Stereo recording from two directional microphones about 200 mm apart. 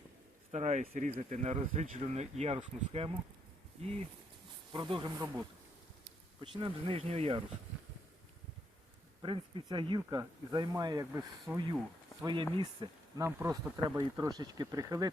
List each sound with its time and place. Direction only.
0.5 s speech: 35° right (ahead or behind); by 5.4 s 15° right (ahead or behind)
6.4 s speech: 25° right (ahead or behind)
9.2 s speech: 25° right (ahead or behind)